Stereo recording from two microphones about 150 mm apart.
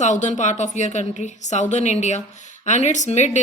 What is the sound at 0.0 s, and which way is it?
Speech, 50° left (ahead or behind).